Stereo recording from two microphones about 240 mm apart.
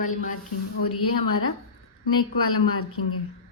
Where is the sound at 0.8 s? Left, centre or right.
Left.